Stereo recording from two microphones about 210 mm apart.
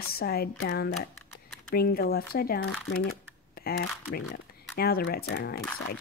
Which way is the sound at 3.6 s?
45° left (ahead or behind).